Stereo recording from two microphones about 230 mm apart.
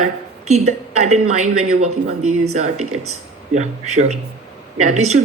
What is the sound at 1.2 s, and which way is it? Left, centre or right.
Speech, right.